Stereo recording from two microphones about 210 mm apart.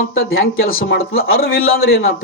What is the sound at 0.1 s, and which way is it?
Speech, 70° left (ahead or behind).